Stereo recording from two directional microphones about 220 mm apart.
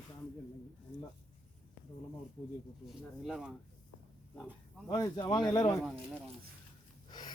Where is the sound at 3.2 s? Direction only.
Centre (ahead or behind).